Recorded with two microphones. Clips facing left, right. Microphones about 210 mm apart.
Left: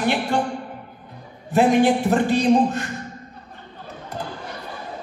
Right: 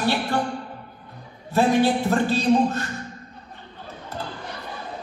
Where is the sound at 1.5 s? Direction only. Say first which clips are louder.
Left 3 dB; 15° left (ahead or behind).